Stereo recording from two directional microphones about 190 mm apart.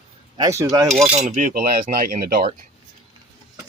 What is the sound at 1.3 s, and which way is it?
Speech, 45° right (ahead or behind).